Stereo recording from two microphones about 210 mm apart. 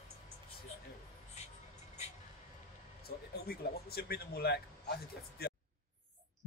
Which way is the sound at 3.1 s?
45° left (ahead or behind).